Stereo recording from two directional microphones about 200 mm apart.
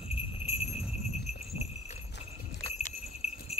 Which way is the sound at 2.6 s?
30° left (ahead or behind).